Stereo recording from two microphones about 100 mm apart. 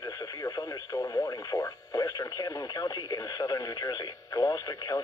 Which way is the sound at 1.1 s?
30° left (ahead or behind).